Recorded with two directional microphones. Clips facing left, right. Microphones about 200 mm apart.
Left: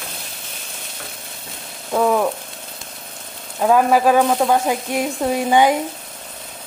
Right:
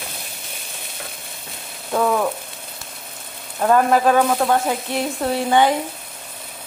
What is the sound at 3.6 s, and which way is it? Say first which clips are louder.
A woman's voice: left 1 dB; 5° left (ahead or behind).